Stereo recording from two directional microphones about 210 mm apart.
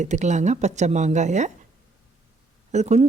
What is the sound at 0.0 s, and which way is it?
Speech, 35° right (ahead or behind).